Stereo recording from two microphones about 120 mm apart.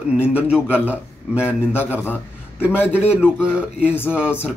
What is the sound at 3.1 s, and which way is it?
Speech, 10° right (ahead or behind).